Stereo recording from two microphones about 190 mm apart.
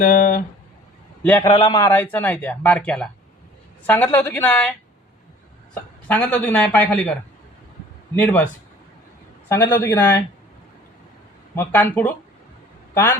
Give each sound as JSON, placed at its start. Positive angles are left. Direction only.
{"t": 0.0, "sound": "speech", "side_deg": 40}
{"t": 1.2, "sound": "a man's voice", "side_deg": 10}
{"t": 1.5, "sound": "speech", "side_deg": 25}
{"t": 5.7, "sound": "speech", "side_deg": 5}
{"t": 8.2, "sound": "speech", "side_deg": 10}
{"t": 9.5, "sound": "speech", "side_deg": 15}
{"t": 11.5, "sound": "a man's voice", "side_deg": 10}